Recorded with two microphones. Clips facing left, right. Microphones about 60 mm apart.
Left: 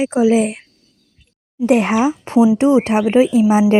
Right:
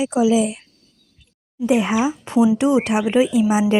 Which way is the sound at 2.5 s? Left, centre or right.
Left.